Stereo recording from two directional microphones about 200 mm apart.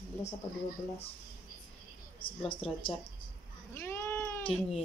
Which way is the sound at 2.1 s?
25° left (ahead or behind).